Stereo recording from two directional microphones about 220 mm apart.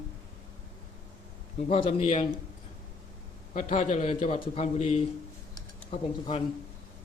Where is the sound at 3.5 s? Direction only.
35° left (ahead or behind).